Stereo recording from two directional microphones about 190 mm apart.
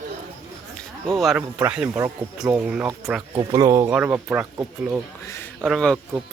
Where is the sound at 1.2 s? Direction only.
Centre (ahead or behind).